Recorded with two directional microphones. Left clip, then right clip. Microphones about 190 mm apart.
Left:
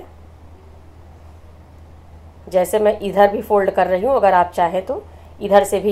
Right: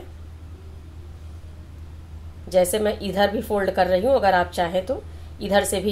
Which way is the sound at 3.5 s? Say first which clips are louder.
Left 8 dB; 35° left (ahead or behind).